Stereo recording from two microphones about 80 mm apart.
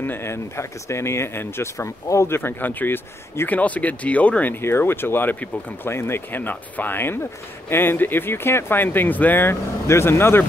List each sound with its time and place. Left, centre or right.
0.0 s speech: left